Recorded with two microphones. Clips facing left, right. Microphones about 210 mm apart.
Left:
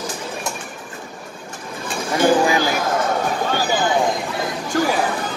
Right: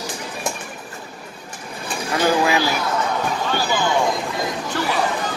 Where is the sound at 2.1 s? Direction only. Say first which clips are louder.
Left 2 dB; 50° left (ahead or behind).